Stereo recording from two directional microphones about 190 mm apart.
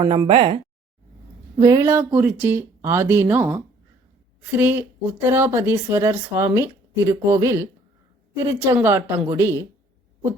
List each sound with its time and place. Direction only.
0.0 s speech: 25° right (ahead or behind)
1.5 s speech: 20° right (ahead or behind)